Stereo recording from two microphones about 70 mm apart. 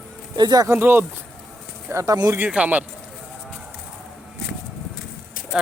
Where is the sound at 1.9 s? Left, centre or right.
Right.